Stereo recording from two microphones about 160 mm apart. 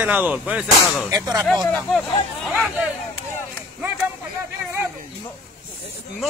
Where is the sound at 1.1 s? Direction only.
25° right (ahead or behind).